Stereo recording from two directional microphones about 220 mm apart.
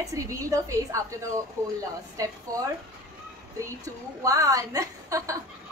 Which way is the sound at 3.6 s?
15° right (ahead or behind).